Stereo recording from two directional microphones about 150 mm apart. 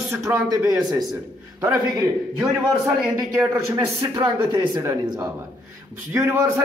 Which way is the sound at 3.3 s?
20° right (ahead or behind).